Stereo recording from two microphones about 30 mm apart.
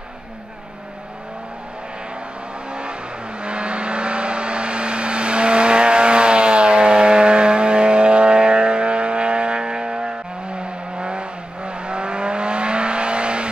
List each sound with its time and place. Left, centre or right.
2.7 s vehicle: right